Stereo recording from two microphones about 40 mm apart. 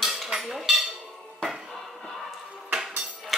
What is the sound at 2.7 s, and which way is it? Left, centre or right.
Music, centre.